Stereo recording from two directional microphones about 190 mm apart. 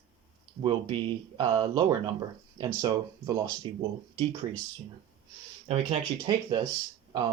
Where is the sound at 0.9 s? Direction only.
25° right (ahead or behind).